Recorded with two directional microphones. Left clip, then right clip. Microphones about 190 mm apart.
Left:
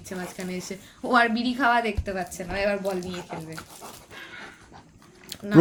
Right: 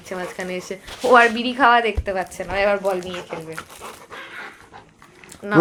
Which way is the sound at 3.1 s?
15° right (ahead or behind).